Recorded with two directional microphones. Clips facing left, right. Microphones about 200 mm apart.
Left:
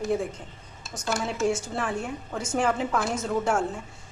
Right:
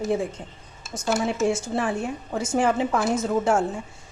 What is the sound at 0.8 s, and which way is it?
Speech, 5° right (ahead or behind).